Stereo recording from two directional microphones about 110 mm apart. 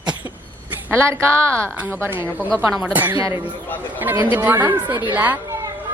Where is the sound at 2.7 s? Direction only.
Centre (ahead or behind).